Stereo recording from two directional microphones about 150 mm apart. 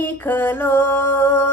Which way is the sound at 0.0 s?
15° left (ahead or behind).